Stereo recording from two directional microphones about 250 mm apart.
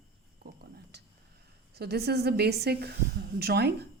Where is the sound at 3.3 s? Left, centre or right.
Right.